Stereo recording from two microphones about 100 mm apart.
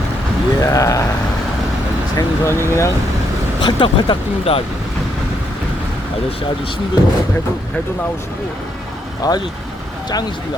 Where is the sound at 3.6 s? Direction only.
55° left (ahead or behind).